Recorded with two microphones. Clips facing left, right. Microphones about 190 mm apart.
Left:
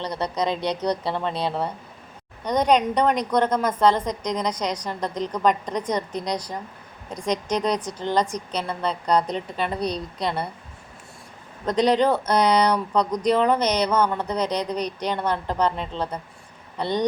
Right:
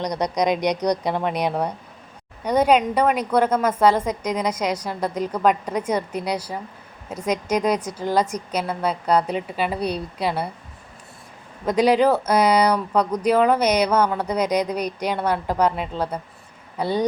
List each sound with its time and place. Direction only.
0.0 s speech: 15° right (ahead or behind)
11.6 s speech: 10° right (ahead or behind)